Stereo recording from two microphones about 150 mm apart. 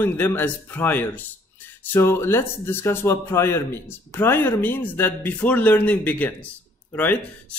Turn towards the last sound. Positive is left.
turn(degrees=10)  # may be behind; listen again after turning